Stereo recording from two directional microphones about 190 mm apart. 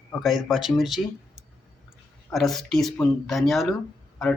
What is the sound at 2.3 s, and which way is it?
Speech, centre (ahead or behind).